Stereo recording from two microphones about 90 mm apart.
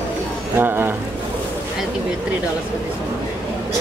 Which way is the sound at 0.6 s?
20° right (ahead or behind).